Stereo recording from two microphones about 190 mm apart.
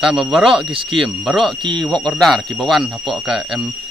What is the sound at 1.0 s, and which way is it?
Speech, centre (ahead or behind).